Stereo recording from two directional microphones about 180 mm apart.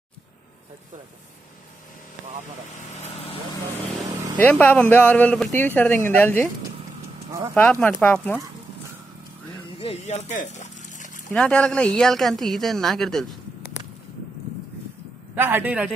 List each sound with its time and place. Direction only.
2.9 s vehicle: 35° left (ahead or behind)
4.0 s vehicle: 20° right (ahead or behind)
4.4 s speech: 10° left (ahead or behind)
7.8 s speech: 10° left (ahead or behind)
9.8 s a sound: 35° left (ahead or behind)
11.3 s speech: 5° left (ahead or behind)
15.3 s a man's voice: 10° right (ahead or behind)